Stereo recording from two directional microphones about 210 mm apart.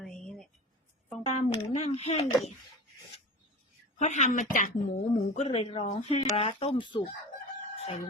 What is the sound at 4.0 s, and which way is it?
Speech, 35° left (ahead or behind).